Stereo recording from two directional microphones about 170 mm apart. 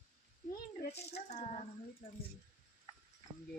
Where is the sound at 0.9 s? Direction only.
40° left (ahead or behind).